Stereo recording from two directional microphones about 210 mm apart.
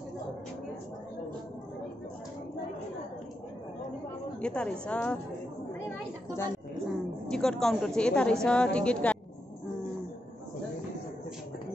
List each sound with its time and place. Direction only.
4.4 s a woman's voice: 5° left (ahead or behind)
5.9 s a sound: 10° left (ahead or behind)
7.2 s a woman's voice: 5° left (ahead or behind)